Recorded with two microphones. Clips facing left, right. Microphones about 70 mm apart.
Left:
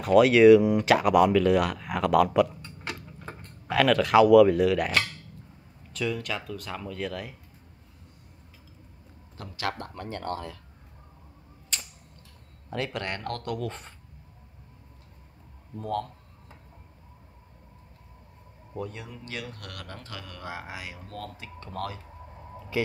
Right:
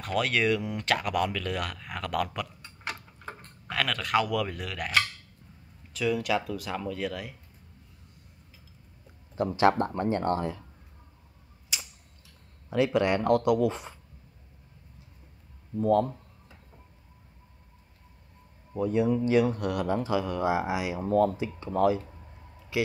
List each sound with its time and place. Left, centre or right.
0.0 s speech: centre
9.6 s speech: right
11.7 s typewriter: centre
12.6 s speech: centre
15.8 s speech: centre
18.8 s speech: centre